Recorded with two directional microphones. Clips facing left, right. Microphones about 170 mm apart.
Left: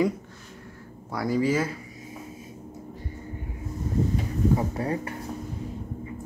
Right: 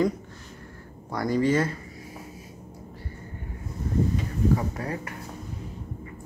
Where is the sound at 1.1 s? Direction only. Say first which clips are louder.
Right 1 dB; 5° left (ahead or behind).